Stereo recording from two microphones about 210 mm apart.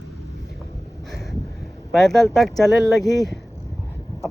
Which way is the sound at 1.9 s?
Centre (ahead or behind).